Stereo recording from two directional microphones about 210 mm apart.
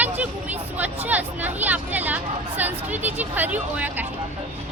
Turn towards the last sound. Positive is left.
turn(degrees=-10)  # may be behind; listen again after turning